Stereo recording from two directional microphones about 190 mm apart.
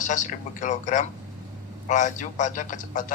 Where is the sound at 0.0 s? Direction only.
40° left (ahead or behind).